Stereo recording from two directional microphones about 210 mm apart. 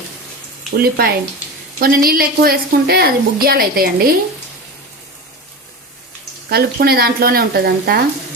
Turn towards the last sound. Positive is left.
turn(degrees=-50)  # may be behind; listen again after turning